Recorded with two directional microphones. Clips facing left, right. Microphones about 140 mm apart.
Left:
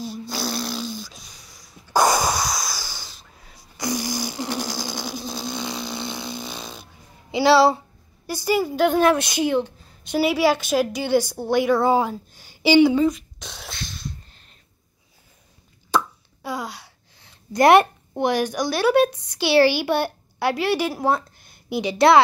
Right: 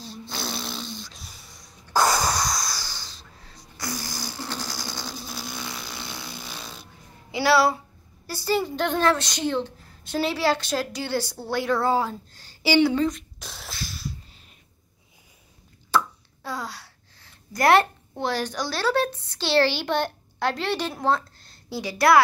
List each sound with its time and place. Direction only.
0.3 s music: 5° left (ahead or behind)
1.9 s breathing: 15° left (ahead or behind)
8.3 s a woman's voice: 15° left (ahead or behind)
13.4 s sneeze: centre (ahead or behind)
15.9 s a sound: 15° left (ahead or behind)
16.4 s a woman's voice: 15° left (ahead or behind)